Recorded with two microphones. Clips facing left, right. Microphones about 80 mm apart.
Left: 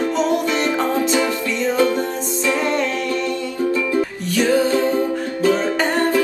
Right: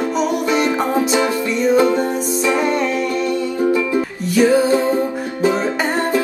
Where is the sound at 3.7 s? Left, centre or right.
Centre.